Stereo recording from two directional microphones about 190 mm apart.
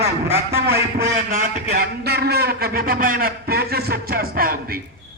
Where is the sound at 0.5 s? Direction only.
55° right (ahead or behind).